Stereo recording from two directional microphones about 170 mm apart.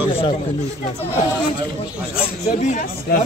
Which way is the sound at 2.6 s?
55° left (ahead or behind).